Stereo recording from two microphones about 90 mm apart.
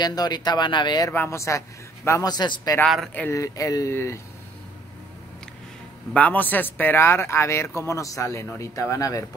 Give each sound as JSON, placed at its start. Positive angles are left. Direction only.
{"t": 0.0, "sound": "speech", "side_deg": 50}
{"t": 1.1, "sound": "speech", "side_deg": 25}
{"t": 2.2, "sound": "speech", "side_deg": 55}
{"t": 3.3, "sound": "speech", "side_deg": 35}
{"t": 6.1, "sound": "speech", "side_deg": 15}